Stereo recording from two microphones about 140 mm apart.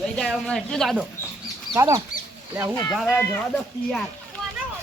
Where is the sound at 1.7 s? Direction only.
20° right (ahead or behind).